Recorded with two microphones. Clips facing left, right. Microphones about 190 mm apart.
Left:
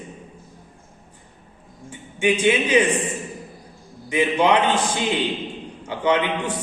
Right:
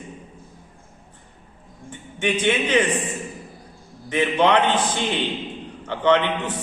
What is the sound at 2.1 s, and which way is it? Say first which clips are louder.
Speech: left 3 dB; 10° left (ahead or behind).